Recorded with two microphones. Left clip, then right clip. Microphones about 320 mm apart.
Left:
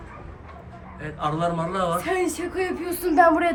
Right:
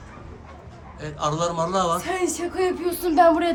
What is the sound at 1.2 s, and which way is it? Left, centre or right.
Speech, centre.